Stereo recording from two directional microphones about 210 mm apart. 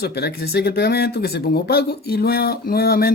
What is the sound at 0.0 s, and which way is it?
Speech, 50° left (ahead or behind).